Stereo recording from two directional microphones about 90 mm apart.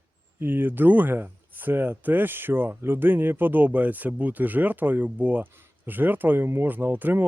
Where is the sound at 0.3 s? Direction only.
20° right (ahead or behind).